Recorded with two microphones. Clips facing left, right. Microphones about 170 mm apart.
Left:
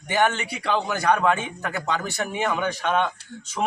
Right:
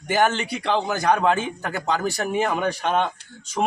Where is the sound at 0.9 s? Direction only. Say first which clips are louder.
Even; 30° right (ahead or behind).